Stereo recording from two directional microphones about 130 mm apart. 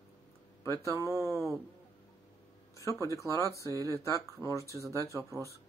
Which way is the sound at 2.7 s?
25° left (ahead or behind).